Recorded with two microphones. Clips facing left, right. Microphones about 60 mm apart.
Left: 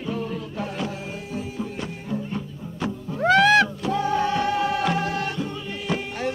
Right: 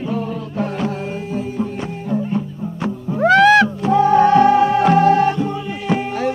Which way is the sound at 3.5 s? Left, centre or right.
Right.